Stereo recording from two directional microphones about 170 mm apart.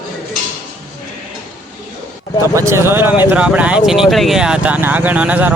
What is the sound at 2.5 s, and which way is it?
Speech, 15° right (ahead or behind).